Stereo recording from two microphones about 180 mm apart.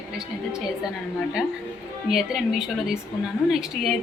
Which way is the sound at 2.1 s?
Centre (ahead or behind).